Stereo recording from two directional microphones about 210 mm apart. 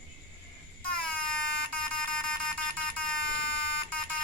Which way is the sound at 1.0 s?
5° left (ahead or behind).